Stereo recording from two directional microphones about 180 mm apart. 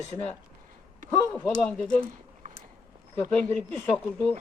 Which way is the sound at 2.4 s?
50° right (ahead or behind).